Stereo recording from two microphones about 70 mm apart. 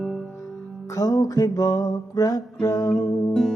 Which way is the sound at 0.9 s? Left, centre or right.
Left.